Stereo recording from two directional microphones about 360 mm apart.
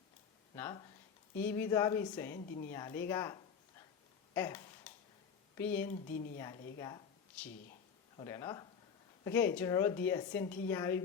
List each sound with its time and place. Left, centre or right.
0.5 s speech: centre
4.4 s a sound: centre
5.5 s speech: centre
6.1 s speech: left
6.7 s a sound: centre
8.1 s speech: centre